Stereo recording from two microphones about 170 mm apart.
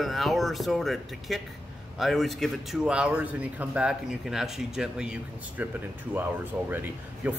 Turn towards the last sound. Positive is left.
turn(degrees=-10)  # may be behind; listen again after turning